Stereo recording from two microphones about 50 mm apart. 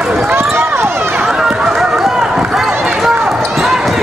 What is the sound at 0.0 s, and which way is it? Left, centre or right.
Run, centre.